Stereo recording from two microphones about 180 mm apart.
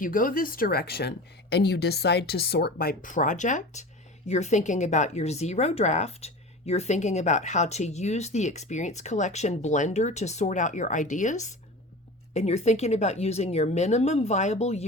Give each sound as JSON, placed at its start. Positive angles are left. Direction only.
{"t": 0.0, "sound": "speech", "side_deg": 50}